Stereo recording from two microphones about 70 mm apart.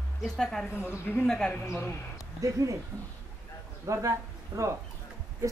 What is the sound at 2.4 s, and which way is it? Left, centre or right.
Speech, right.